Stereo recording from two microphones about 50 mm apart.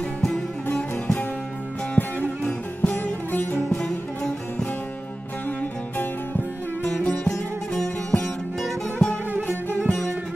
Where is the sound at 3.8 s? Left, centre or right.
Centre.